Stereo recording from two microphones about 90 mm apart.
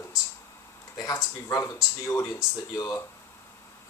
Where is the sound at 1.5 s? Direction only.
35° left (ahead or behind).